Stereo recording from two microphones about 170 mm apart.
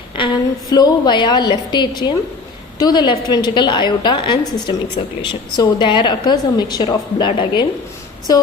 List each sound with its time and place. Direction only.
0.2 s a sound: 30° left (ahead or behind)
0.7 s a woman's voice: 25° left (ahead or behind)
8.3 s music: 20° left (ahead or behind)